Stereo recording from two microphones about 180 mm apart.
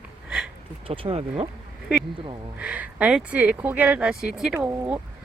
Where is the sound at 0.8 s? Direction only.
30° right (ahead or behind).